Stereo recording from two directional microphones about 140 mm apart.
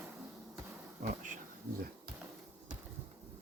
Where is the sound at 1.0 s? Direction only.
70° right (ahead or behind).